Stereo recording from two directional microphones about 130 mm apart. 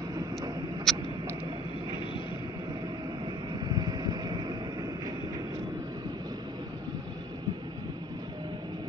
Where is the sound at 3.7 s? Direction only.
30° right (ahead or behind).